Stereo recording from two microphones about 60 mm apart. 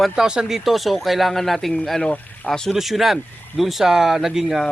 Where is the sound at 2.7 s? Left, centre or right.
Centre.